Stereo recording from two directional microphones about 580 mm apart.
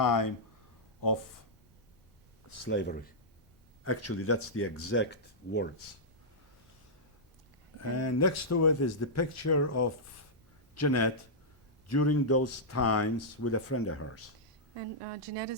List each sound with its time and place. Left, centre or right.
0.0 s speech: left
2.6 s speech: centre
7.8 s speech: left
15.0 s speech: right